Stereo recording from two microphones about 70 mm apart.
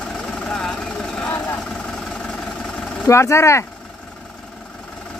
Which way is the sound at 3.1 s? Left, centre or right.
Left.